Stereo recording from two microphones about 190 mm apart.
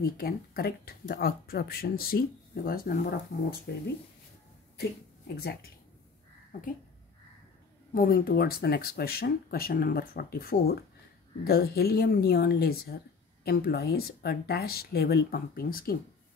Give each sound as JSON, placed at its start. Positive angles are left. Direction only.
{"t": 0.0, "sound": "a woman's voice", "side_deg": 55}
{"t": 5.3, "sound": "speech", "side_deg": 55}
{"t": 7.9, "sound": "a woman's voice", "side_deg": 50}